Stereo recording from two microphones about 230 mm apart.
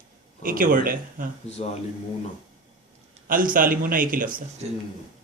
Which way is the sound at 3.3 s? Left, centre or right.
Right.